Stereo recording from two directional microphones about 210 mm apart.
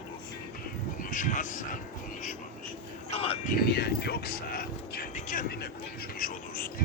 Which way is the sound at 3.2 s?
25° left (ahead or behind).